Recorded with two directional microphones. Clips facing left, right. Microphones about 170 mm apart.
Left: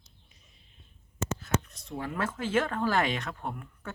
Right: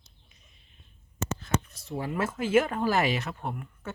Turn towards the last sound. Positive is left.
turn(degrees=-5)  # may be behind; listen again after turning